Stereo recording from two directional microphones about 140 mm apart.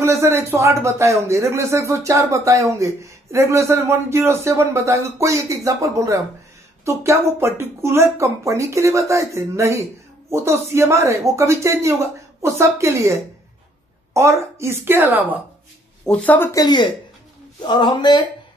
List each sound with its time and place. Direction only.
0.0 s a man's voice: 20° right (ahead or behind)
16.1 s speech: 10° left (ahead or behind)
16.5 s a man's voice: 30° left (ahead or behind)